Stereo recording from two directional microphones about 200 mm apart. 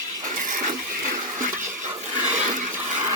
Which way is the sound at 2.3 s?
40° right (ahead or behind).